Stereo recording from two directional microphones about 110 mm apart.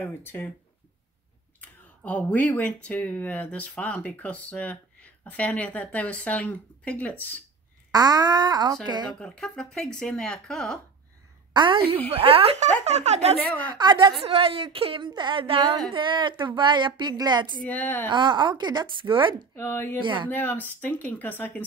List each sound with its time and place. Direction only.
0.0 s speech: 15° left (ahead or behind)
1.6 s speech: 15° left (ahead or behind)
7.9 s speech: 35° right (ahead or behind)
9.2 s speech: 10° left (ahead or behind)
11.5 s a woman's voice: 45° right (ahead or behind); by 13.4 s 85° right
13.7 s a woman's voice: 45° right (ahead or behind)
14.2 s a woman's voice: 60° right (ahead or behind)
15.9 s a woman's voice: 45° right (ahead or behind)
17.6 s speech: 15° left (ahead or behind)
18.0 s a woman's voice: 45° right (ahead or behind)
19.5 s speech: 20° left (ahead or behind)
20.0 s a woman's voice: 45° right (ahead or behind)
20.2 s speech: 15° left (ahead or behind)